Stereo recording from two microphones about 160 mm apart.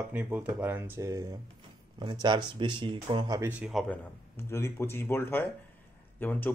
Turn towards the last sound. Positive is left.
turn(degrees=10)  # may be behind; listen again after turning